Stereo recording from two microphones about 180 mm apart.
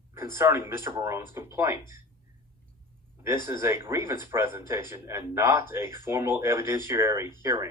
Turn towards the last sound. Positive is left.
turn(degrees=-15)  # may be behind; listen again after turning